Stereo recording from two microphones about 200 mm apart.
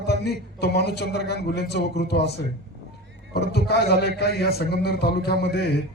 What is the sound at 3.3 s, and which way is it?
Speech, 55° left (ahead or behind).